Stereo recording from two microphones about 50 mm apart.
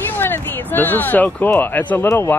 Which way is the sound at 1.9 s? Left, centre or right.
Left.